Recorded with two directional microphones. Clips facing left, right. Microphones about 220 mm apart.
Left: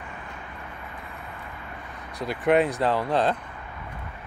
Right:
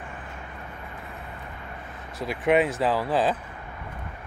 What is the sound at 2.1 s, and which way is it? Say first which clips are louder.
Speech: left 1 dB; centre (ahead or behind).